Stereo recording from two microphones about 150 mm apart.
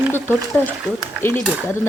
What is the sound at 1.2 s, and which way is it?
Speech, 10° right (ahead or behind).